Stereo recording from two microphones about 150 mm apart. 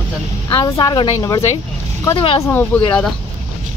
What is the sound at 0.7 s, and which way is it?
Speech, 30° left (ahead or behind).